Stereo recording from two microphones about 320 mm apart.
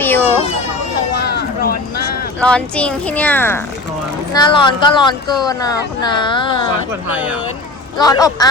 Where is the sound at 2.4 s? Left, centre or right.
Centre.